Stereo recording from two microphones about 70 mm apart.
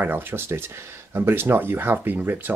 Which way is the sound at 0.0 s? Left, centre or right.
Right.